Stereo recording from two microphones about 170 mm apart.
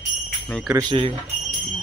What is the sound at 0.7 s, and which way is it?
Speech, 30° right (ahead or behind).